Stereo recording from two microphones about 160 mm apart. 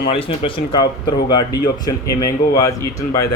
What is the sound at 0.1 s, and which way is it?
Speech, 35° left (ahead or behind).